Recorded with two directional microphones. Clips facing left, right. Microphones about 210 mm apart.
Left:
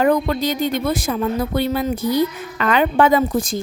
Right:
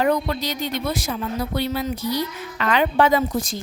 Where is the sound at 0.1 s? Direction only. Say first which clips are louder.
Left 4 dB; 50° left (ahead or behind).